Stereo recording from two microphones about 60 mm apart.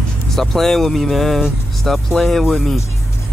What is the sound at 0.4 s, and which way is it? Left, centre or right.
Speech, centre.